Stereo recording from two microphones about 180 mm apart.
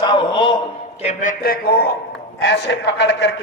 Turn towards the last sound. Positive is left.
turn(degrees=75)  # may be behind; listen again after turning